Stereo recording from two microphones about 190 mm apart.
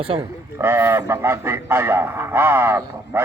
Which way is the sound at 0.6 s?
10° right (ahead or behind).